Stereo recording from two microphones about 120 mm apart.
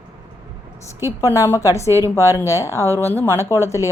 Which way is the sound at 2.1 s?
20° left (ahead or behind).